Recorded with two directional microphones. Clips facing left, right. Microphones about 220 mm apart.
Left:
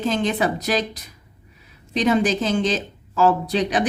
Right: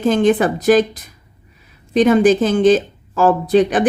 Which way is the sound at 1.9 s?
50° right (ahead or behind).